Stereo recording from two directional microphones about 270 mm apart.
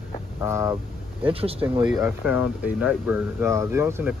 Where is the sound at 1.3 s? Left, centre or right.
Right.